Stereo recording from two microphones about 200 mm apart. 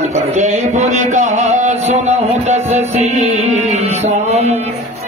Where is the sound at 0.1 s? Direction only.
35° right (ahead or behind).